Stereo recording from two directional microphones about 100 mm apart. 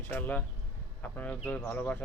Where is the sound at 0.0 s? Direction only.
20° left (ahead or behind).